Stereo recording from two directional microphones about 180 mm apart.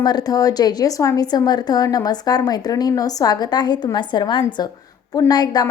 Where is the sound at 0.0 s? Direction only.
20° left (ahead or behind).